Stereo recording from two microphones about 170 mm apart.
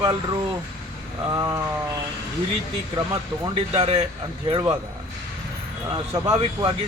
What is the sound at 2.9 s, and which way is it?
Speech, 30° right (ahead or behind).